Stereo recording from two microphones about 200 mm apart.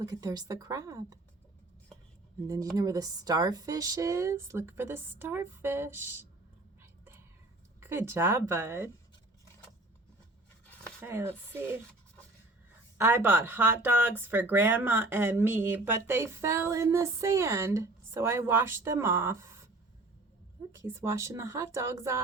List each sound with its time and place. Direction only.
0.1 s speech: 20° right (ahead or behind)
2.7 s speech: 15° right (ahead or behind)
7.8 s speech: 10° right (ahead or behind)
10.7 s a sound: 5° left (ahead or behind)
11.0 s speech: 10° right (ahead or behind)
13.0 s speech: 10° right (ahead or behind)
20.7 s speech: 10° right (ahead or behind)